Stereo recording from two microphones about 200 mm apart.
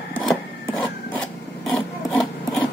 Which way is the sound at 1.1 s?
5° left (ahead or behind).